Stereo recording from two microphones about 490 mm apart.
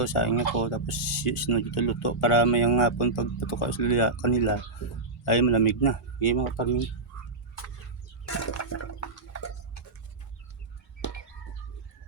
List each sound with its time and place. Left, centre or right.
0.0 s speech: left
8.3 s toilet flush: left